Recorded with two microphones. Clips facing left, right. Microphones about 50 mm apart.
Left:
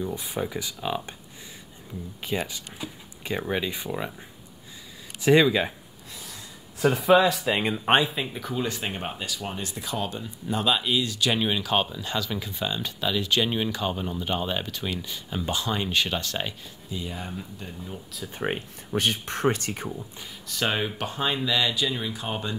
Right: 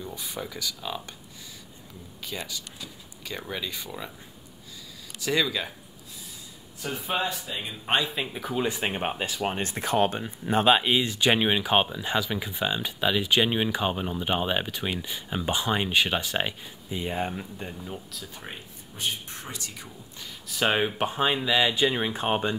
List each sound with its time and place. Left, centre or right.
0.0 s speech: left
2.2 s speech: left
5.2 s speech: left
6.8 s speech: left
8.1 s speech: centre
8.5 s speech: centre
17.0 s speech: right
18.5 s speech: left
20.4 s speech: centre
20.7 s speech: right
21.8 s speech: right